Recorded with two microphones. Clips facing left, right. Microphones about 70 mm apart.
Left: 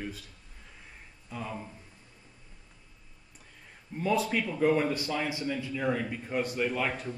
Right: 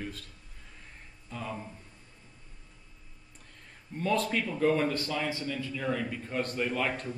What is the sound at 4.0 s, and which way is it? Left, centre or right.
Speech, centre.